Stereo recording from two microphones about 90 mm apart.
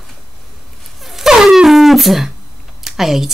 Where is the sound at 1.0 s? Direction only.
5° right (ahead or behind).